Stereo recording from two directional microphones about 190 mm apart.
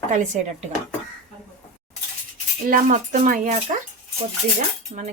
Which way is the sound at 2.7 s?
45° right (ahead or behind).